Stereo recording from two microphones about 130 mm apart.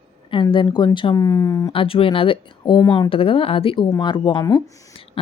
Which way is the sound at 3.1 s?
45° left (ahead or behind).